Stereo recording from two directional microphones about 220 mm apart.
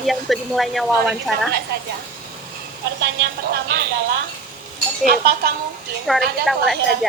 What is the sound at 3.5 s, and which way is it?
Speech, 45° right (ahead or behind).